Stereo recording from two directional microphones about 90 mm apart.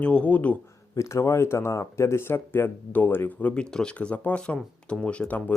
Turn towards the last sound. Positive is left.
turn(degrees=15)  # may be behind; listen again after turning